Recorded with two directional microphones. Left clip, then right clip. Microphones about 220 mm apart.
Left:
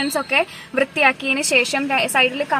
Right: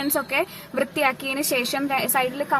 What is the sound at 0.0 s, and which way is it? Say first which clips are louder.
A woman's voice: left 5 dB; 15° left (ahead or behind).